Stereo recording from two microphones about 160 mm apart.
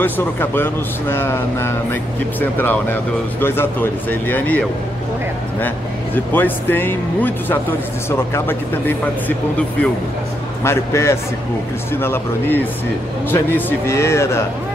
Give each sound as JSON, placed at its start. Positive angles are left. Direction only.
{"t": 0.0, "sound": "speech", "side_deg": 15}
{"t": 6.1, "sound": "speech", "side_deg": 10}
{"t": 10.6, "sound": "speech", "side_deg": 15}